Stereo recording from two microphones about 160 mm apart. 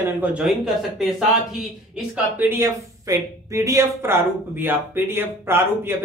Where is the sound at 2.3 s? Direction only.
15° right (ahead or behind).